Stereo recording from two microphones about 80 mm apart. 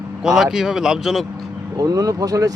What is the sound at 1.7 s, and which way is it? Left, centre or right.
Speech, right.